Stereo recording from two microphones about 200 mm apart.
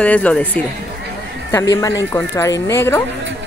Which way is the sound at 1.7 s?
15° left (ahead or behind).